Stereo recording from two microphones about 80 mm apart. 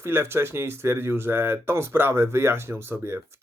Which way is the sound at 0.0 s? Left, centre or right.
Right.